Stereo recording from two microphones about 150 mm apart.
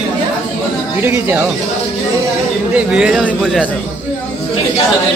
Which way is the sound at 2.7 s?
5° right (ahead or behind).